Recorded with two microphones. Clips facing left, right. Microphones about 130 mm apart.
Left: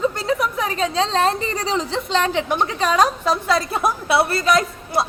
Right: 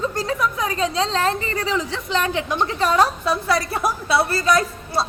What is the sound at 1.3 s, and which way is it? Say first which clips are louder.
Speech: left 1 dB; 35° left (ahead or behind).